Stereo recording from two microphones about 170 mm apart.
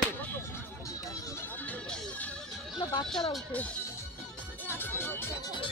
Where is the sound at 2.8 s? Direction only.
25° left (ahead or behind).